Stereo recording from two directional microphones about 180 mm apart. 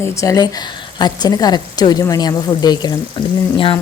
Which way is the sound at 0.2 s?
20° left (ahead or behind).